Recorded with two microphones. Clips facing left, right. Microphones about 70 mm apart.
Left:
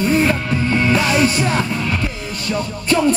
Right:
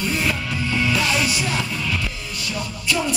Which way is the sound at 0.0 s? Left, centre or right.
Left.